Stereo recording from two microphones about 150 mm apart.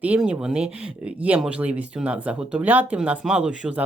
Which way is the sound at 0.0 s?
10° right (ahead or behind).